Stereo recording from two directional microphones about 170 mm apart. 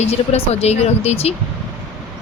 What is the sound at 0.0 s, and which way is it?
Speech, 40° left (ahead or behind).